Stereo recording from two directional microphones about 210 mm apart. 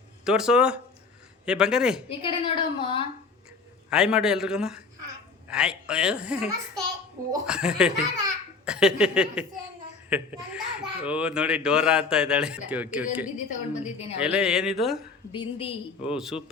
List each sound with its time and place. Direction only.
0.3 s a child's voice: 5° right (ahead or behind)
2.0 s a woman's voice: 25° left (ahead or behind)
3.8 s a child's voice: 5° right (ahead or behind)
13.3 s a woman's voice: 35° left (ahead or behind)
14.2 s a child's voice: 5° right (ahead or behind)
15.3 s a woman's voice: 25° left (ahead or behind)
16.0 s a child's voice: 5° right (ahead or behind)